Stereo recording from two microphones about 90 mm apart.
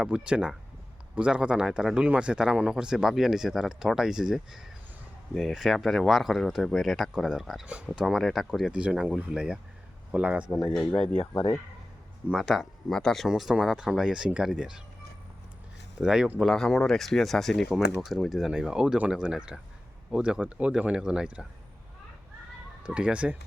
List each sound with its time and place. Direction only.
0.0 s speech: 10° right (ahead or behind)
12.3 s speech: centre (ahead or behind)
16.0 s speech: 5° right (ahead or behind)
16.5 s speech: 5° left (ahead or behind)
22.8 s speech: 10° right (ahead or behind)